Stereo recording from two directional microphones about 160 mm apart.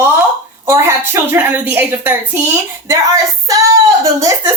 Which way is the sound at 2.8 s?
20° right (ahead or behind).